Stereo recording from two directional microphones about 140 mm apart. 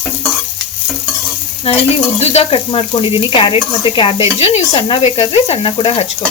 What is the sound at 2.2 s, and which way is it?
Stir, 45° left (ahead or behind).